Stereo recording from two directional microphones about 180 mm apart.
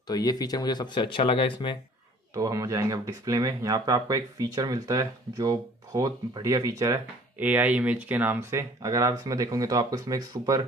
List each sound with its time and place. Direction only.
0.1 s speech: 20° left (ahead or behind)
2.3 s speech: 15° right (ahead or behind)